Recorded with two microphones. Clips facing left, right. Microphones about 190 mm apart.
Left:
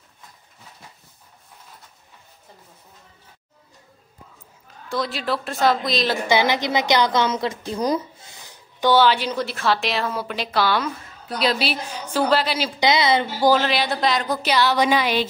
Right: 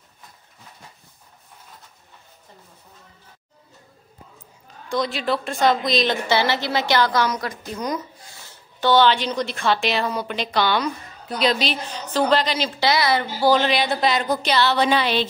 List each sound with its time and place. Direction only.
4.8 s a woman's voice: centre (ahead or behind)
6.2 s a woman's voice: 15° left (ahead or behind)
12.9 s a woman's voice: 20° left (ahead or behind)
13.5 s a woman's voice: centre (ahead or behind)